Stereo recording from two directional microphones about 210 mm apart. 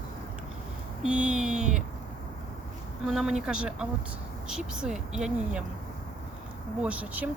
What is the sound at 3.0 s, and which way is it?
Speech, 5° right (ahead or behind).